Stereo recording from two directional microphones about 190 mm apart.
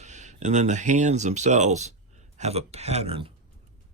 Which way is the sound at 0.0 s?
40° right (ahead or behind).